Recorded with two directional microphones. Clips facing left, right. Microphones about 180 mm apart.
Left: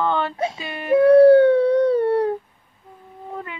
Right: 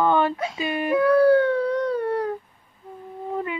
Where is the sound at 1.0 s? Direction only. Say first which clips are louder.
Left 6 dB; 25° left (ahead or behind).